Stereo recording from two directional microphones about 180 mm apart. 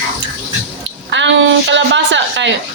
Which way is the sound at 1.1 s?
90° right.